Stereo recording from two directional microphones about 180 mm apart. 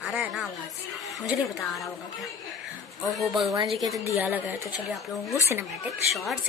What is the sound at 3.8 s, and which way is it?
A woman's voice, centre (ahead or behind).